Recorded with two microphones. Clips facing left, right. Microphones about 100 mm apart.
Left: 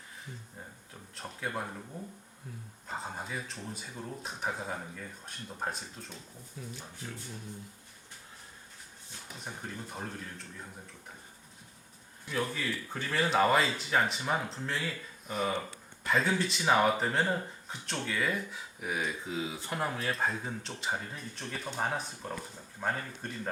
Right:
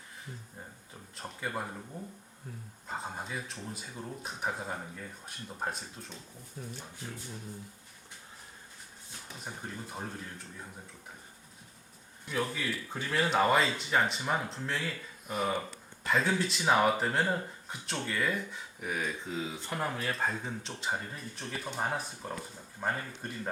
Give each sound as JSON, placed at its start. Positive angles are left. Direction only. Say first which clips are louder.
{"t": 1.1, "sound": "speech", "louder": "even", "side_deg": 0}
{"t": 2.8, "sound": "speech", "louder": "even", "side_deg": 0}
{"t": 6.6, "sound": "speech", "louder": "right 1 dB", "side_deg": -40}
{"t": 9.4, "sound": "speech", "louder": "even", "side_deg": -5}
{"t": 12.3, "sound": "speech", "louder": "even", "side_deg": -5}